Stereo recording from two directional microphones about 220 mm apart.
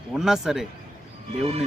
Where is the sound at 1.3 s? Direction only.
25° right (ahead or behind).